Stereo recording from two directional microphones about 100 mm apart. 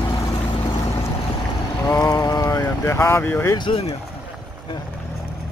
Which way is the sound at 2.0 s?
35° left (ahead or behind).